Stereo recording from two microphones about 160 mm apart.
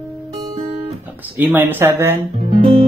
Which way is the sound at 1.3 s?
10° right (ahead or behind).